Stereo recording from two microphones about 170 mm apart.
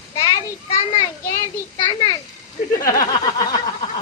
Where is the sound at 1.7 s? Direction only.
25° left (ahead or behind).